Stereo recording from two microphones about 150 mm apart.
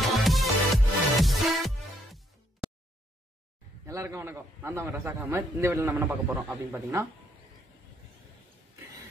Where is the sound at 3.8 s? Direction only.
20° right (ahead or behind).